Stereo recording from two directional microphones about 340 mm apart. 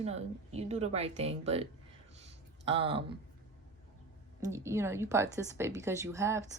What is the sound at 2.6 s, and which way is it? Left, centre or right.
Speech, centre.